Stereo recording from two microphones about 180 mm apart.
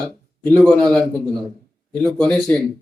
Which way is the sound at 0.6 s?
5° left (ahead or behind).